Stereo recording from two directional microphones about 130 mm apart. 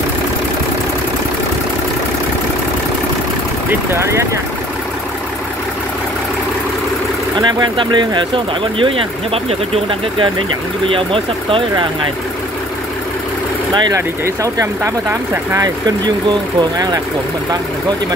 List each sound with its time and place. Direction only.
3.9 s speech: 20° right (ahead or behind)
7.3 s speech: 35° right (ahead or behind)
13.7 s speech: 35° right (ahead or behind)
14.2 s speech: 25° right (ahead or behind)